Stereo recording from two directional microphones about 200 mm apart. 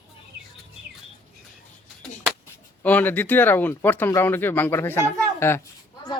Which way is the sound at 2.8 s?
10° left (ahead or behind).